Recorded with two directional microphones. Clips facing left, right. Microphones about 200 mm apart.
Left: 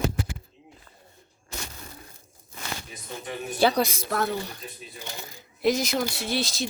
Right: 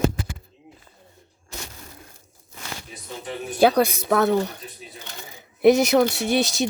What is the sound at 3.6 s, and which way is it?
Speech, 55° right (ahead or behind).